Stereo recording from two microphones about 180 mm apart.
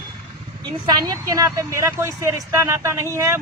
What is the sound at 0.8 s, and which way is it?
A man's voice, 25° right (ahead or behind).